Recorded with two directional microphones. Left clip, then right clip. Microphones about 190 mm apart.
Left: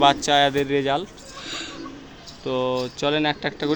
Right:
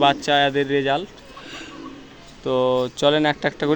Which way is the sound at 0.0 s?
25° right (ahead or behind).